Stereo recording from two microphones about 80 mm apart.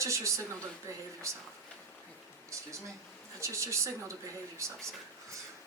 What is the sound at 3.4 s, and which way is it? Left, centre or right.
Speech, right.